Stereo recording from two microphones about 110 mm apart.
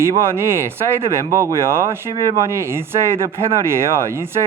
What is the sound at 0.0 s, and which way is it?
Speech, 20° right (ahead or behind).